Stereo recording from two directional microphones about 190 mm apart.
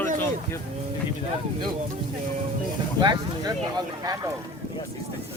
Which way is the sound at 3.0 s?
20° right (ahead or behind).